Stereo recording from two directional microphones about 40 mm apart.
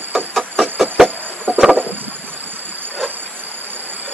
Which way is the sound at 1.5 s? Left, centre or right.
Right.